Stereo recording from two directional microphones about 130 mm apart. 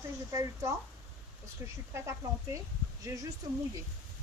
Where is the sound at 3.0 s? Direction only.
25° right (ahead or behind).